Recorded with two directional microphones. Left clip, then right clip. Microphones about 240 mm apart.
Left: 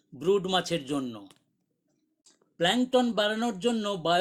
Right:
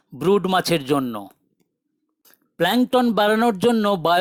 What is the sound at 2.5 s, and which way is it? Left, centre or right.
Speech, right.